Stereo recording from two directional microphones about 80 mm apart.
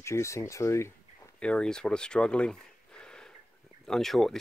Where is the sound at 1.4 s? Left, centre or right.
Centre.